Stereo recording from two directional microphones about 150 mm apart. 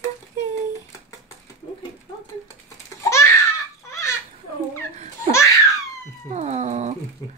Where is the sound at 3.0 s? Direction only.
20° left (ahead or behind).